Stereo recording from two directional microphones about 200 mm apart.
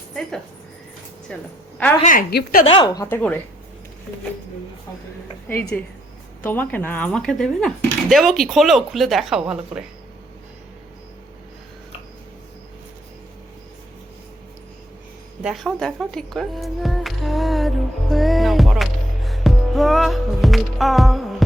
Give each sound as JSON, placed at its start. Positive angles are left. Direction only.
{"t": 0.1, "sound": "a sound", "side_deg": 0}
{"t": 1.3, "sound": "speech", "side_deg": 5}
{"t": 2.0, "sound": "speech", "side_deg": 40}
{"t": 2.6, "sound": "speech", "side_deg": 25}
{"t": 5.5, "sound": "speech", "side_deg": 10}
{"t": 15.4, "sound": "speech", "side_deg": 0}